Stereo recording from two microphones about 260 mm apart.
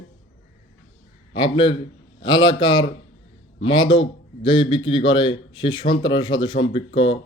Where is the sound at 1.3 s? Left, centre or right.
Centre.